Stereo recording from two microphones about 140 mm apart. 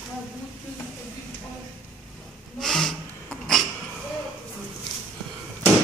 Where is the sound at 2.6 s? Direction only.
5° left (ahead or behind).